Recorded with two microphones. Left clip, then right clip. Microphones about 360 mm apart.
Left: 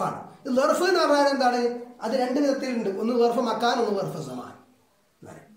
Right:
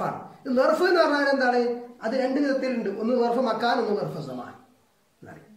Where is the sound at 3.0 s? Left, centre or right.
Centre.